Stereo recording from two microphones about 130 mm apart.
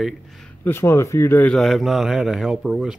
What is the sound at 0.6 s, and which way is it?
Speech, 20° left (ahead or behind).